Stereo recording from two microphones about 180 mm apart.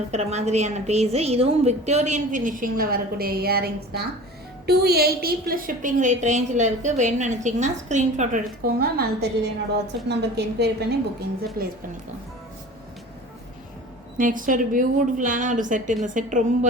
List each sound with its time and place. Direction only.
0.1 s a woman's voice: 40° right (ahead or behind); by 11.7 s 60° right (ahead or behind)
14.2 s a woman's voice: 50° right (ahead or behind)